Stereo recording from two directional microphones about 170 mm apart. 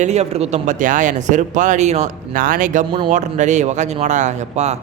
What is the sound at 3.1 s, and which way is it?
Speech, 45° right (ahead or behind).